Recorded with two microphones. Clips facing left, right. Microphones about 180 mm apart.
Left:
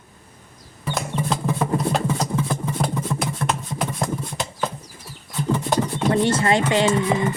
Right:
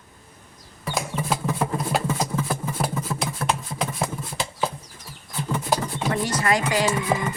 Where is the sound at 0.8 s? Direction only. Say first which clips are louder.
Left 2 dB; 5° right (ahead or behind).